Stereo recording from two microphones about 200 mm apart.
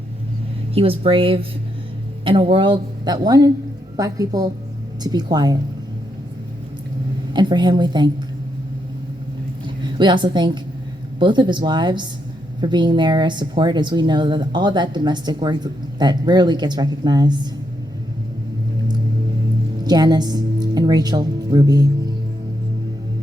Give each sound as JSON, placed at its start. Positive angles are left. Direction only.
{"t": 0.7, "sound": "a woman's voice", "side_deg": -30}
{"t": 7.3, "sound": "speech", "side_deg": -20}
{"t": 9.6, "sound": "a woman's voice", "side_deg": -25}
{"t": 19.8, "sound": "speech", "side_deg": -20}